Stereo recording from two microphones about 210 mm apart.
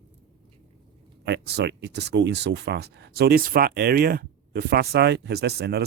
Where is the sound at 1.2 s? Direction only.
55° right (ahead or behind).